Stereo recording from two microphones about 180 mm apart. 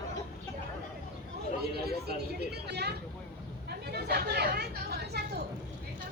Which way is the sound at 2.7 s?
65° right (ahead or behind).